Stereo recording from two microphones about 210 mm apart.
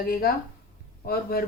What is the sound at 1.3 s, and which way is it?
Speech, 45° left (ahead or behind).